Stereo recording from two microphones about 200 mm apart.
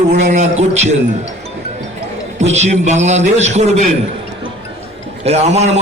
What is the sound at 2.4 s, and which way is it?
Music, 35° right (ahead or behind).